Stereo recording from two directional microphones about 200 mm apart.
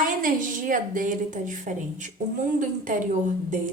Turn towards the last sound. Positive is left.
turn(degrees=-40)  # may be behind; listen again after turning